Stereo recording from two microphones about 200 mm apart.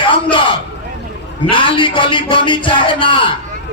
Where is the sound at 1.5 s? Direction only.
25° left (ahead or behind).